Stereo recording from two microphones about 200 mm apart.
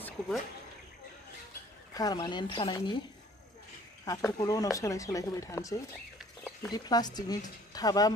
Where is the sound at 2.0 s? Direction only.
20° left (ahead or behind).